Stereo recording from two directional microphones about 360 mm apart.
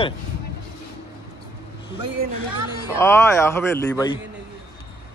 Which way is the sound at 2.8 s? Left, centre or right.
Centre.